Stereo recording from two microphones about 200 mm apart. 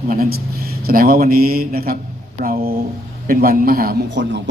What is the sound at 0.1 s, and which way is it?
A man's voice, 45° right (ahead or behind).